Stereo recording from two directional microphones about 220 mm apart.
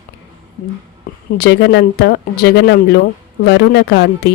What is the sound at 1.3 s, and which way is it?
Speech, 50° left (ahead or behind).